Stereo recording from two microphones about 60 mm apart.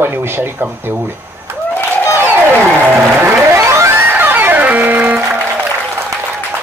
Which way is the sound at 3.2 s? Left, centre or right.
Right.